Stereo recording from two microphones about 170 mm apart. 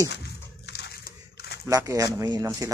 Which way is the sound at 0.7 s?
75° left (ahead or behind).